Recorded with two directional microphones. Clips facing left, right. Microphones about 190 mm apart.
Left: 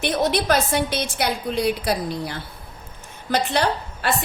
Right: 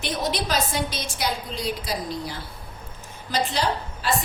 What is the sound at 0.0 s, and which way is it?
A woman's voice, 60° left (ahead or behind).